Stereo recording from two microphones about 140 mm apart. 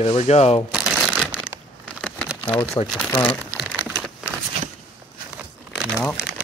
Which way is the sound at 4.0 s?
5° right (ahead or behind).